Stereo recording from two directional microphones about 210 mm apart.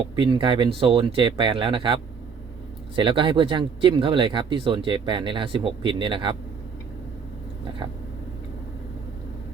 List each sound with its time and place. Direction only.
0.2 s speech: 25° right (ahead or behind)